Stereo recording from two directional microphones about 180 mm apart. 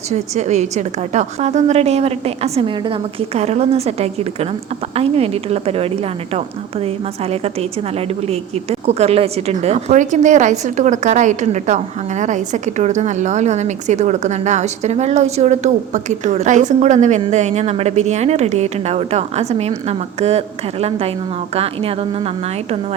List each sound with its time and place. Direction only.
0.1 s a woman's voice: 40° right (ahead or behind)